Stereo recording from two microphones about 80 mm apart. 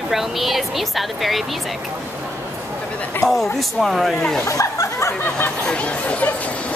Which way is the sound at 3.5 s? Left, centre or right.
Centre.